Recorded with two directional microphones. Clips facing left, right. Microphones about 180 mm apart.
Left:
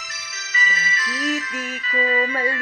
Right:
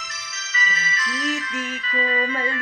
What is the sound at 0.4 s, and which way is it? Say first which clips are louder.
Music: left 1 dB; 10° left (ahead or behind).